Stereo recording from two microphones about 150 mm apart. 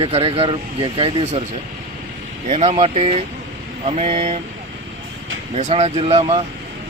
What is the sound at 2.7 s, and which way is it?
Speech, 40° right (ahead or behind).